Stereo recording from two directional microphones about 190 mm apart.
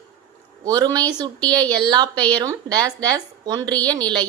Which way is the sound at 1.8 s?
20° right (ahead or behind).